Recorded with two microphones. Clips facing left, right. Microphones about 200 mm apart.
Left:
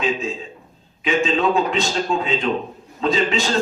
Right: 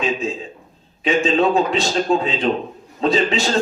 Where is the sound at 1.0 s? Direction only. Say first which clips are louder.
Right 2 dB; 35° right (ahead or behind).